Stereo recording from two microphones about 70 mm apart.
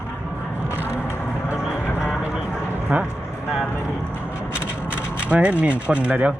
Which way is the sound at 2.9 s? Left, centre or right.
Centre.